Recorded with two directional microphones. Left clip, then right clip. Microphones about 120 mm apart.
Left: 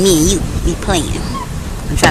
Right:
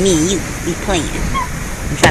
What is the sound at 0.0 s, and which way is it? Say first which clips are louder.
Speech: left 2 dB; 30° left (ahead or behind).